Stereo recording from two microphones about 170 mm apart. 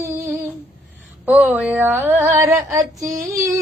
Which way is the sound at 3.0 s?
20° right (ahead or behind).